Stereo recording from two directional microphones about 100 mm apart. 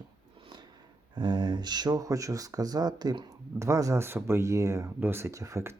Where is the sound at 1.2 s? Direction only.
45° right (ahead or behind).